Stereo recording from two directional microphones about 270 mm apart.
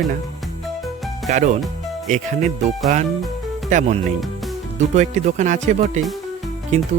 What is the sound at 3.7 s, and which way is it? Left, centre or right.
Speech, right.